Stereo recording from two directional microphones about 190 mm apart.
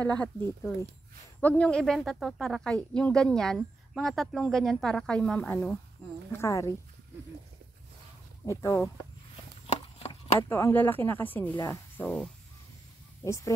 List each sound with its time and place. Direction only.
0.0 s speech: 5° left (ahead or behind)
8.5 s speech: 15° left (ahead or behind)
9.7 s a sound: 35° left (ahead or behind)
10.5 s speech: 10° left (ahead or behind)
13.2 s speech: 15° left (ahead or behind)